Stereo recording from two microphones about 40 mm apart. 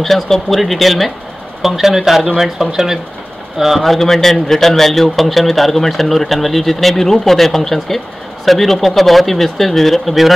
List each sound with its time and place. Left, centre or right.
0.0 s speech: centre